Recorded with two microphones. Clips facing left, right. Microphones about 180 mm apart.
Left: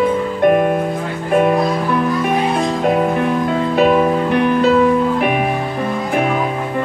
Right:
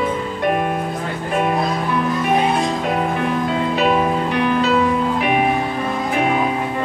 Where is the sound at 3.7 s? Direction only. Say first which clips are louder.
Left 6 dB; 50° left (ahead or behind).